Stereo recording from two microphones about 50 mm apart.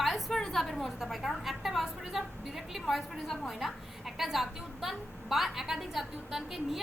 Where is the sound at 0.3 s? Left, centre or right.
Centre.